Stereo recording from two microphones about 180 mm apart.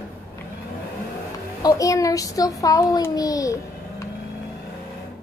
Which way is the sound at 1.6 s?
20° left (ahead or behind).